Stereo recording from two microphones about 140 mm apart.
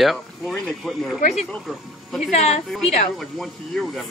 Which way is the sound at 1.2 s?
60° left (ahead or behind).